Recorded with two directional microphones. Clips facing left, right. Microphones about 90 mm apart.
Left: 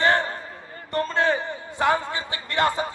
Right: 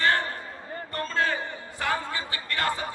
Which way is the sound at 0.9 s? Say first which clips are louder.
Left 5 dB; 20° left (ahead or behind).